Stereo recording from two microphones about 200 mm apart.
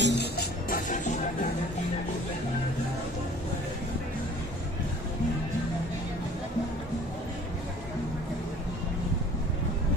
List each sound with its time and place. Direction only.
0.0 s music: 55° left (ahead or behind)
0.8 s music: 40° left (ahead or behind)